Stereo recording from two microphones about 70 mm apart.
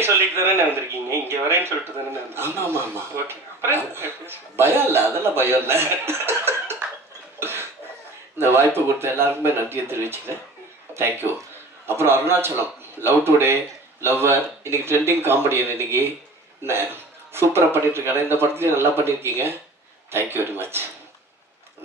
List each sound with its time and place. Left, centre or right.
0.0 s a man's voice: right
7.3 s cough: right
8.4 s a man's voice: right